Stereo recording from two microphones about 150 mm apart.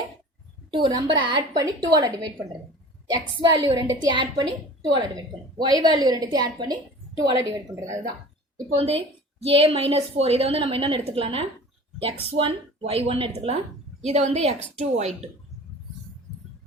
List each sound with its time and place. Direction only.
0.7 s a woman's voice: 30° right (ahead or behind)
8.5 s a woman's voice: 40° right (ahead or behind)